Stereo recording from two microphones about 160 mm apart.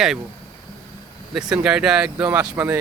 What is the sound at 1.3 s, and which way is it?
Speech, 5° right (ahead or behind).